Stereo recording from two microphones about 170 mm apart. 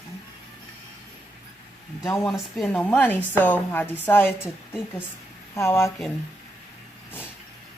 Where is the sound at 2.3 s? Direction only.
5° left (ahead or behind).